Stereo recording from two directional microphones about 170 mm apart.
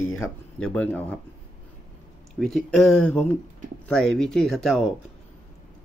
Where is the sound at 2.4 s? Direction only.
5° left (ahead or behind).